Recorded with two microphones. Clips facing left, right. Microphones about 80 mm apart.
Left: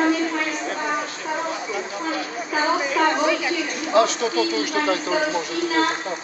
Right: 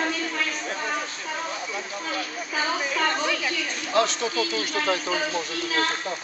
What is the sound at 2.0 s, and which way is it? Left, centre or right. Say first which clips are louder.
Speech: left 4 dB; centre.